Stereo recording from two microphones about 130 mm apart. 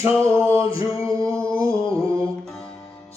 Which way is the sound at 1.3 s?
10° left (ahead or behind).